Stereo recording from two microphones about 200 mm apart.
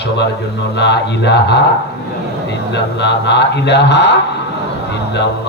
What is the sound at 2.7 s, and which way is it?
A man's voice, 60° left (ahead or behind).